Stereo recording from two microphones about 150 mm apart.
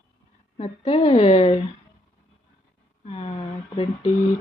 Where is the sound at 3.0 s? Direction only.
40° left (ahead or behind).